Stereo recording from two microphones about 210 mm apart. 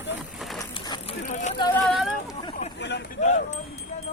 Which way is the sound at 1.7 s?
5° left (ahead or behind).